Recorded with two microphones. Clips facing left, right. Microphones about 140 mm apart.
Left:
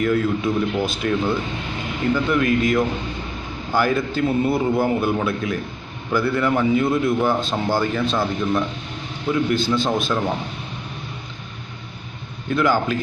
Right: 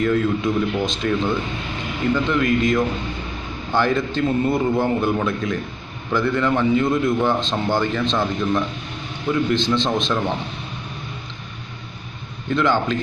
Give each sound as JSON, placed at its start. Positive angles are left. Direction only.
{"t": 0.0, "sound": "a man's voice", "side_deg": 5}
{"t": 12.4, "sound": "a man's voice", "side_deg": 5}